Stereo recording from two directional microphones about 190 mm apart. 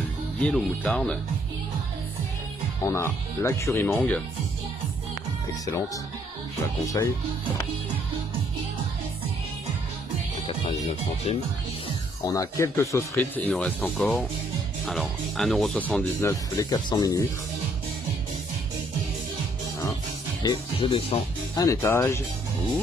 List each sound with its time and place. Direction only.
0.4 s speech: 5° left (ahead or behind)
2.8 s speech: 15° left (ahead or behind)
10.4 s speech: 30° left (ahead or behind)
12.3 s speech: 15° left (ahead or behind)
20.4 s speech: 25° left (ahead or behind)
21.6 s speech: 15° left (ahead or behind)